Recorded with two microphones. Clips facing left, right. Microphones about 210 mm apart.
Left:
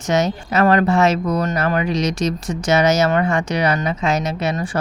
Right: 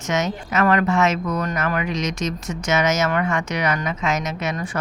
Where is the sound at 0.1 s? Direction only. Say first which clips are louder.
Left 4 dB; 35° left (ahead or behind).